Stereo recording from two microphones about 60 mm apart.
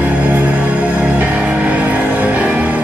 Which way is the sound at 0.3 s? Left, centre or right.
Right.